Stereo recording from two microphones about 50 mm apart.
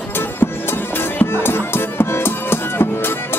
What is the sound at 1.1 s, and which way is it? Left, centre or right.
Music, left.